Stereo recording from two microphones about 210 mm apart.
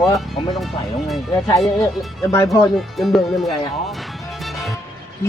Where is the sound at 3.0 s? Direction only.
Centre (ahead or behind).